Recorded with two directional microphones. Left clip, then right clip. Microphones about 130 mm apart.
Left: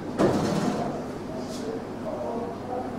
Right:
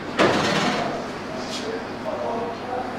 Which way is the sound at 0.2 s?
20° right (ahead or behind).